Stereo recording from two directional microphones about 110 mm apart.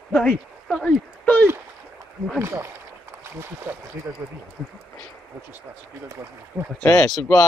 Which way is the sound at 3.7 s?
20° right (ahead or behind).